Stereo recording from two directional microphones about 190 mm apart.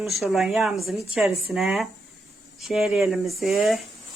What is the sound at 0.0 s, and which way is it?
Speech, centre (ahead or behind).